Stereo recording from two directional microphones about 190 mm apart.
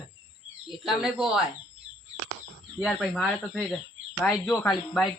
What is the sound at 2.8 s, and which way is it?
Speech, centre (ahead or behind).